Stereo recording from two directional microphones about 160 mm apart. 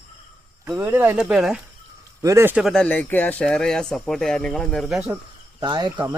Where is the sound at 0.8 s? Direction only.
15° right (ahead or behind).